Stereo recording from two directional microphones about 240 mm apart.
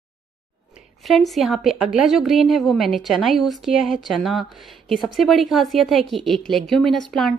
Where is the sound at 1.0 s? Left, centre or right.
Centre.